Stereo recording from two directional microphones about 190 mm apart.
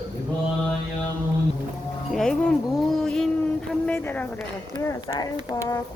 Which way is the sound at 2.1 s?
5° left (ahead or behind).